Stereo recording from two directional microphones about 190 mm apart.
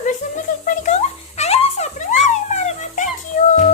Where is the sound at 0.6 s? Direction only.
40° left (ahead or behind).